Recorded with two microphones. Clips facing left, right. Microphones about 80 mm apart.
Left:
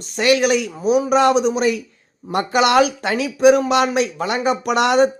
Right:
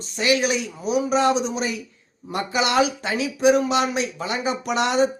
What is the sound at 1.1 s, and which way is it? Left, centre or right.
Speech, left.